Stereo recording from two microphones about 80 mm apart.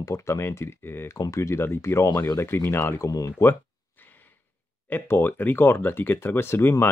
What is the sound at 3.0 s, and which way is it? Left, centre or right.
Speech, left.